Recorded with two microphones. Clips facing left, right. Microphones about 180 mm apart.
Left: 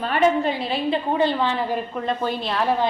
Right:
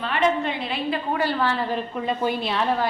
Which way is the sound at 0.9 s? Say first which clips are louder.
Left 4 dB; 20° left (ahead or behind).